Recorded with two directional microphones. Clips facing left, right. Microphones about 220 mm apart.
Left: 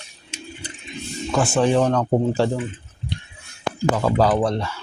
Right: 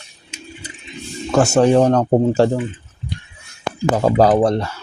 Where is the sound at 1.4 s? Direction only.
40° right (ahead or behind).